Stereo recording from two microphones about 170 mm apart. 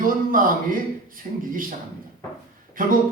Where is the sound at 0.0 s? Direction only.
55° right (ahead or behind).